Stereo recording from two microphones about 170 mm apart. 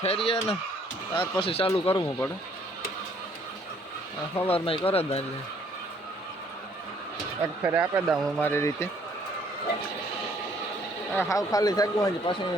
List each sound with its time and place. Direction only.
0.0 s speech: 35° left (ahead or behind)
4.4 s speech: 35° left (ahead or behind)
7.6 s speech: 10° right (ahead or behind)
8.4 s speech: 15° left (ahead or behind)
11.1 s speech: 15° left (ahead or behind)